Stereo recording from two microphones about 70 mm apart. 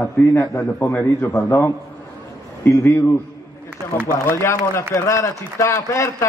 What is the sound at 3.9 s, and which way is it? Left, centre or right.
A man's voice, left.